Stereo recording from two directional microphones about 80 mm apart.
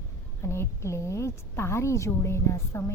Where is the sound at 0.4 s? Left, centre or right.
Left.